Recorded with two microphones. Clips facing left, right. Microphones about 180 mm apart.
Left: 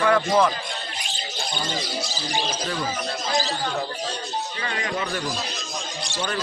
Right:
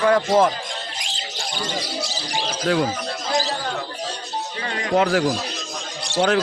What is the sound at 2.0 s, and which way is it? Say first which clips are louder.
Speech: even; 70° right (ahead or behind).